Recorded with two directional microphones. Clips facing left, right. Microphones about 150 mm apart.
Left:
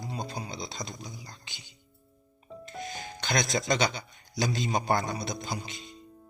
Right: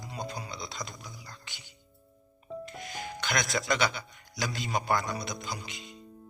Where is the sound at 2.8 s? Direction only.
25° left (ahead or behind).